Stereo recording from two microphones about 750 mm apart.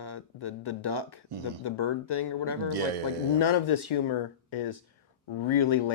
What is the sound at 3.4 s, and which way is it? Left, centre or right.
Speech, left.